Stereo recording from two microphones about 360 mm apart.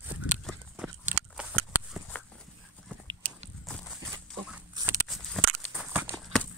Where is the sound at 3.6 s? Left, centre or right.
Centre.